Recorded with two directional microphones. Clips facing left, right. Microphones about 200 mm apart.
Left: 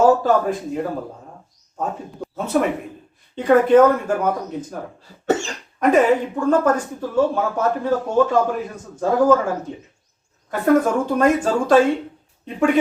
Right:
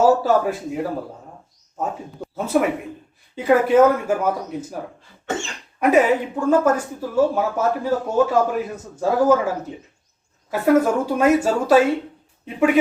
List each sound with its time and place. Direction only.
0.2 s a woman's voice: 5° right (ahead or behind)
5.2 s dog: 40° left (ahead or behind)
5.8 s a woman's voice: 5° right (ahead or behind)
10.5 s a woman's voice: 5° right (ahead or behind)